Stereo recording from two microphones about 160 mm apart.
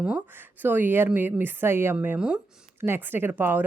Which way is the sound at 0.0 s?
10° right (ahead or behind).